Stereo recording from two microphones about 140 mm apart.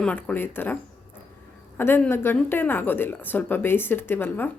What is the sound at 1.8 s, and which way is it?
Speech, 15° left (ahead or behind).